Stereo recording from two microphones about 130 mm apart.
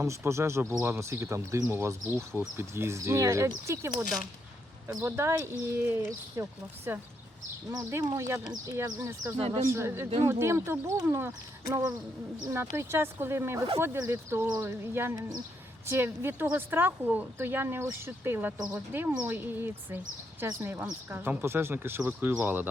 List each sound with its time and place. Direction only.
0.3 s speech: 20° right (ahead or behind)